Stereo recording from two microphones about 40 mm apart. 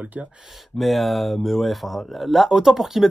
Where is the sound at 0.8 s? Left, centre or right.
Centre.